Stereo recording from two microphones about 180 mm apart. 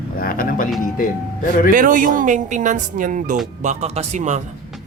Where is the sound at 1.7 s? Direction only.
50° right (ahead or behind).